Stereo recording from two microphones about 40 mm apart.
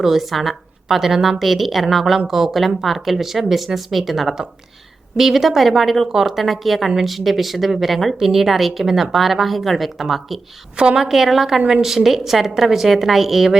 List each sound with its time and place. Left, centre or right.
0.0 s a woman's voice: centre
10.8 s a woman's voice: right
11.1 s a woman's voice: centre